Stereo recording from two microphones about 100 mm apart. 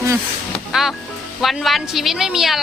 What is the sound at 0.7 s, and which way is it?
Music, 5° right (ahead or behind).